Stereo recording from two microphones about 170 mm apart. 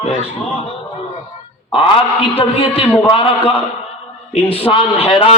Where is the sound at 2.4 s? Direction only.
35° left (ahead or behind).